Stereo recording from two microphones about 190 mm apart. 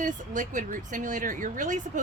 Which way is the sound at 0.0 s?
40° right (ahead or behind).